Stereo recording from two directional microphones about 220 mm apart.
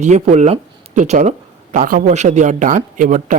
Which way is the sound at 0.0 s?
30° right (ahead or behind).